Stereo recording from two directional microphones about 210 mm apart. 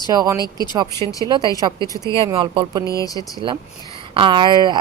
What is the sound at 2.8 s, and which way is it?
Speech, 15° left (ahead or behind).